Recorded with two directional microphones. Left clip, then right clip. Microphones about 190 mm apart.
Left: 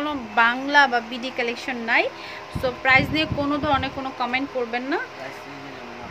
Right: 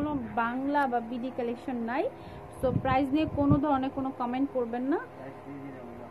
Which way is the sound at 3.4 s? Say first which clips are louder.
Left 3 dB; 15° left (ahead or behind).